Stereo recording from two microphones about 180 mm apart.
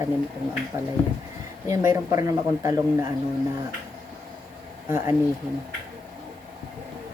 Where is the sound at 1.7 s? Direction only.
15° right (ahead or behind).